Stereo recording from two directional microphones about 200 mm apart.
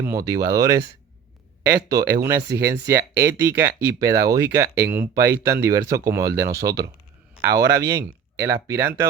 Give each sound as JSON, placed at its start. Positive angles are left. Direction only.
{"t": 0.0, "sound": "speech", "side_deg": -15}
{"t": 1.9, "sound": "speech", "side_deg": -15}
{"t": 7.4, "sound": "speech", "side_deg": -50}
{"t": 7.9, "sound": "speech", "side_deg": -15}